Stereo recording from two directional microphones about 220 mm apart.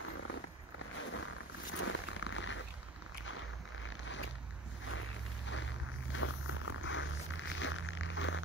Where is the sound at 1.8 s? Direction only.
65° left (ahead or behind).